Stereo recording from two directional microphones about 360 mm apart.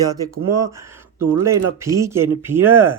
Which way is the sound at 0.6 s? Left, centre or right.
Centre.